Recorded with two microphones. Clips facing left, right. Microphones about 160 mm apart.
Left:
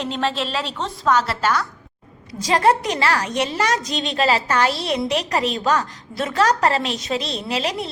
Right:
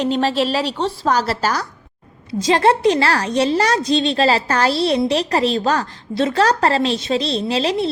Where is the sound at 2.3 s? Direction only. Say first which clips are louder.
Right 3 dB; 25° right (ahead or behind).